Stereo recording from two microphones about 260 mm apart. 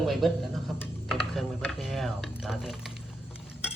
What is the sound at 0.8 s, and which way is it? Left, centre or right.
Computer keyboard, centre.